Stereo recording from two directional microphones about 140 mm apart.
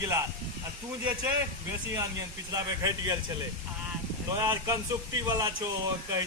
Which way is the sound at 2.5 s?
25° right (ahead or behind).